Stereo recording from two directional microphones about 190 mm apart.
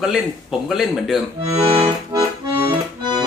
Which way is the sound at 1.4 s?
15° right (ahead or behind).